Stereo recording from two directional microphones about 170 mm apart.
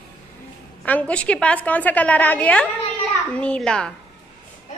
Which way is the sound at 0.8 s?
10° left (ahead or behind).